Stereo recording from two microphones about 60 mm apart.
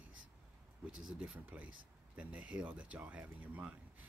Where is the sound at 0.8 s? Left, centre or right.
Centre.